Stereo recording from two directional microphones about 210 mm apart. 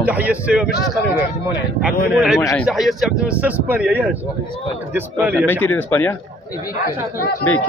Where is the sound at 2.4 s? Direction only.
15° left (ahead or behind).